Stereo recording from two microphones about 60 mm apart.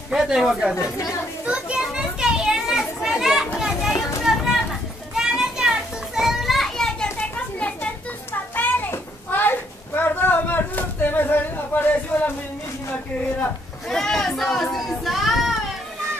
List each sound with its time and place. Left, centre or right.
0.1 s speech: centre
0.7 s speech: left
1.4 s a child's voice: centre
2.0 s children playing: centre
7.0 s a sound: left
13.8 s speech: centre